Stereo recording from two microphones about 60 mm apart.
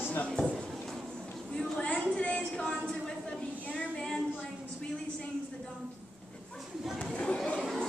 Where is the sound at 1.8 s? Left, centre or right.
Left.